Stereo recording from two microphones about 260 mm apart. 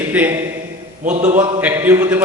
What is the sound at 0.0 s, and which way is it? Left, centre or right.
A man's voice, centre.